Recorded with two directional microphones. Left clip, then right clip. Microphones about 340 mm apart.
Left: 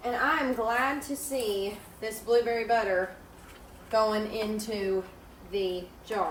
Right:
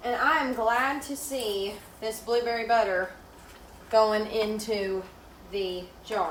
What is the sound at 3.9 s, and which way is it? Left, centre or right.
Speech, centre.